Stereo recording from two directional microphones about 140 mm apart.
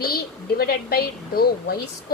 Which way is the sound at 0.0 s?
90° left.